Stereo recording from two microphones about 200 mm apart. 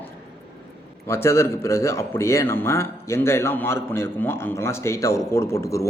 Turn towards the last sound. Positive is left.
turn(degrees=15)  # may be behind; listen again after turning